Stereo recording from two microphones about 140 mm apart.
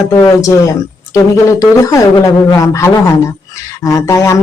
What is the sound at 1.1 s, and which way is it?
Speech, 20° left (ahead or behind).